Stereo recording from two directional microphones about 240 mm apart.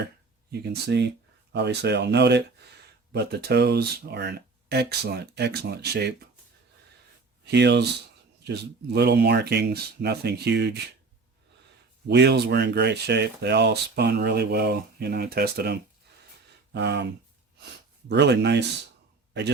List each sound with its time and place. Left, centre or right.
0.5 s speech: right
7.4 s speech: right
12.0 s speech: right